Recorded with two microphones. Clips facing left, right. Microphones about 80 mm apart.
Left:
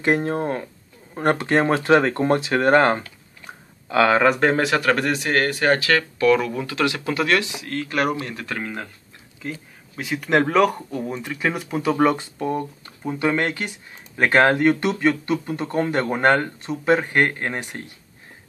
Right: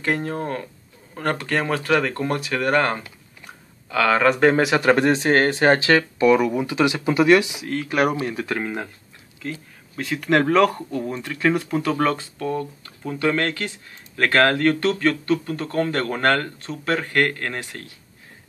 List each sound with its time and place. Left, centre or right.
0.0 s speech: left
3.4 s a sound: left
4.3 s speech: centre
4.7 s speech: right
9.4 s speech: centre